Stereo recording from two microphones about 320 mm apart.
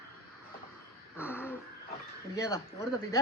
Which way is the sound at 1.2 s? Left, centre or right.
Centre.